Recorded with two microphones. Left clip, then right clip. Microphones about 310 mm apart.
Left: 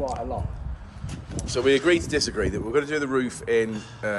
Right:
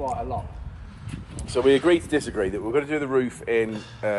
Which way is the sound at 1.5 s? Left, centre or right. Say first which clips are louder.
Right 2 dB; centre.